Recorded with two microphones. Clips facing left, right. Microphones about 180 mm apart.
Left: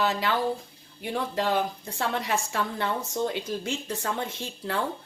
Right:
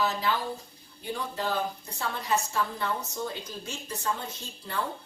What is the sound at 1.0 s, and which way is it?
A woman's voice, 80° left.